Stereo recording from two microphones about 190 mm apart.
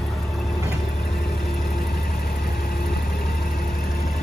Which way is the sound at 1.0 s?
55° left (ahead or behind).